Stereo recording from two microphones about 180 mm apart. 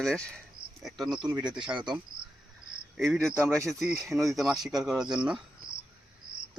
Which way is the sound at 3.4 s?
15° right (ahead or behind).